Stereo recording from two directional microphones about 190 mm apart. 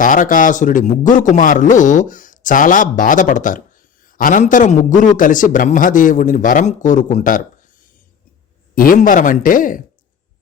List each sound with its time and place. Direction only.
0.0 s a man's voice: 45° left (ahead or behind)